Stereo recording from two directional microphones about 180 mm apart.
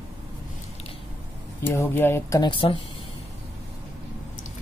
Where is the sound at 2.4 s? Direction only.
30° left (ahead or behind).